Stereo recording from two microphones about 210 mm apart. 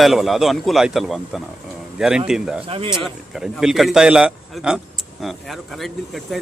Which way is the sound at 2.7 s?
25° right (ahead or behind).